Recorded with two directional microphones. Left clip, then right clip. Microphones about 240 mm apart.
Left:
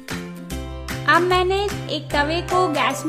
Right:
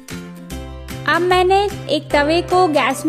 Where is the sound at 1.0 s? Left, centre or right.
Right.